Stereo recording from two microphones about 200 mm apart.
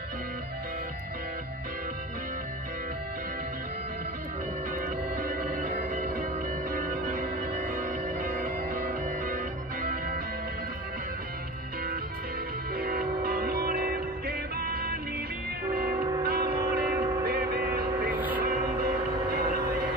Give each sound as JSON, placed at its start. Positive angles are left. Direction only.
{"t": 4.8, "sound": "music", "side_deg": -45}
{"t": 12.7, "sound": "music", "side_deg": -50}
{"t": 15.9, "sound": "train", "side_deg": -15}
{"t": 16.3, "sound": "train", "side_deg": -50}
{"t": 16.9, "sound": "train", "side_deg": -15}
{"t": 17.3, "sound": "vehicle", "side_deg": -55}
{"t": 18.1, "sound": "vehicle", "side_deg": -10}